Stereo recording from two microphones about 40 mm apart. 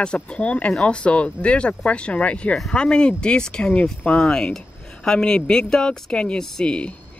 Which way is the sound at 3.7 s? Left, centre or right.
Left.